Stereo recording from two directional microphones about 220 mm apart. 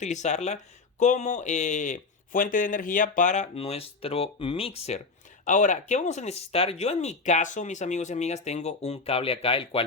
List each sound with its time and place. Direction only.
0.0 s speech: 30° left (ahead or behind)